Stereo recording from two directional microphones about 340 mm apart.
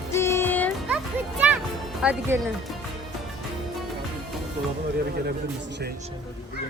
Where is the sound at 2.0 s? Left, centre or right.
Centre.